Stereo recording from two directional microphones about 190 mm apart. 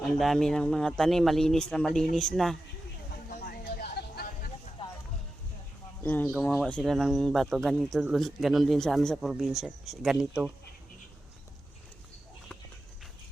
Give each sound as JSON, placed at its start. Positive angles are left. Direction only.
{"t": 0.2, "sound": "speech", "side_deg": 0}
{"t": 3.2, "sound": "a sound", "side_deg": 50}
{"t": 6.0, "sound": "speech", "side_deg": 10}